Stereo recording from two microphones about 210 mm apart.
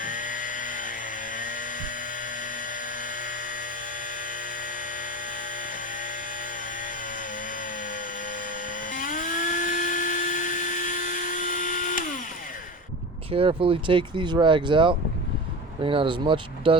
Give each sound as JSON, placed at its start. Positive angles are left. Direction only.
{"t": 0.0, "sound": "chainsaw", "side_deg": 40}
{"t": 3.0, "sound": "dental drill", "side_deg": 40}
{"t": 8.9, "sound": "dental drill", "side_deg": 40}
{"t": 13.3, "sound": "speech", "side_deg": -25}